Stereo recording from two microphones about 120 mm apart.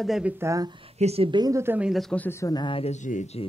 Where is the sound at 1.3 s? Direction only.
30° right (ahead or behind).